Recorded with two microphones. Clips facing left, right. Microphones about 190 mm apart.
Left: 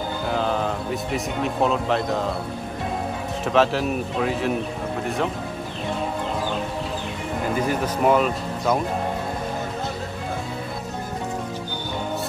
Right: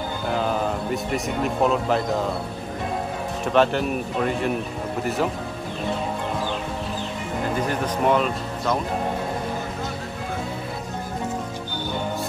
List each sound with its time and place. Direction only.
0.3 s speech: 5° right (ahead or behind)
3.4 s speech: centre (ahead or behind)
7.6 s speech: 5° left (ahead or behind)